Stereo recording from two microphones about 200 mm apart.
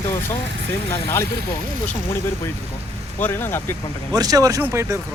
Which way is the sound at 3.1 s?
10° left (ahead or behind).